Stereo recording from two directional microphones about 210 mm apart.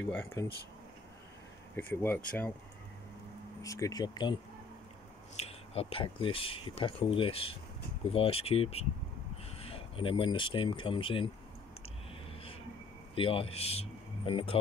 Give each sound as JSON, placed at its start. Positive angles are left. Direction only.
{"t": 0.1, "sound": "speech", "side_deg": 15}
{"t": 1.8, "sound": "speech", "side_deg": 10}
{"t": 3.6, "sound": "speech", "side_deg": 15}
{"t": 13.1, "sound": "speech", "side_deg": 25}